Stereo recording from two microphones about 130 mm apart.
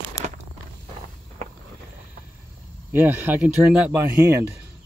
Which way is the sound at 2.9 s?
15° right (ahead or behind).